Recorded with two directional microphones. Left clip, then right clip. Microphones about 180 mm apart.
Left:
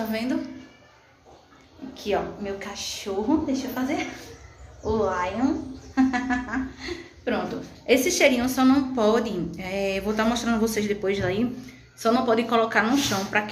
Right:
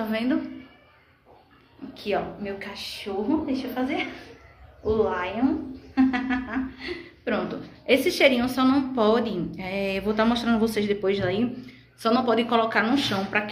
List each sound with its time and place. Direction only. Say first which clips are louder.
0.1 s a woman's voice: right 2 dB; 25° right (ahead or behind)
2.1 s a woman's voice: left 1 dB; 5° left (ahead or behind)
7.2 s a woman's voice: even; 5° right (ahead or behind)